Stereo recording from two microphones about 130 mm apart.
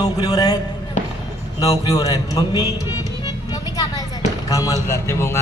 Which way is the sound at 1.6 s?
25° left (ahead or behind).